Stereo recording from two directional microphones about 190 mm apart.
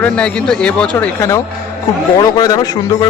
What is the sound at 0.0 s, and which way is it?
Speech, 5° left (ahead or behind).